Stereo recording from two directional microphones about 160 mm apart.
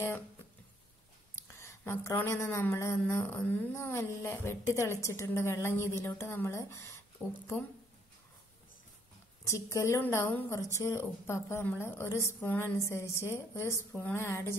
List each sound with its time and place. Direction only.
1.3 s a woman's voice: 15° left (ahead or behind)
7.2 s speech: 10° right (ahead or behind)
9.5 s a woman's voice: 20° left (ahead or behind)